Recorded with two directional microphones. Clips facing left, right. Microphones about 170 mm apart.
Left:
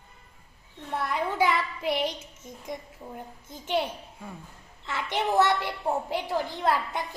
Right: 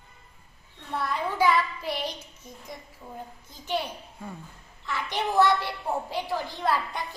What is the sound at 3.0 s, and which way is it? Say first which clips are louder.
A woman's voice: left 1 dB; 25° left (ahead or behind).